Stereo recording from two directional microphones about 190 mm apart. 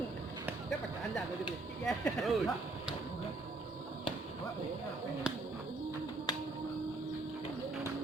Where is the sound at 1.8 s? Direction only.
Centre (ahead or behind).